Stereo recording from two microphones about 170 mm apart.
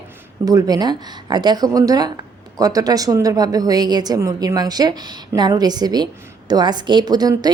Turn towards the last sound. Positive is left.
turn(degrees=-25)  # may be behind; listen again after turning